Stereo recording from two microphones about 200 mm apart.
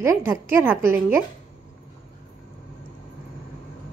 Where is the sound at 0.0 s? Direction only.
10° right (ahead or behind).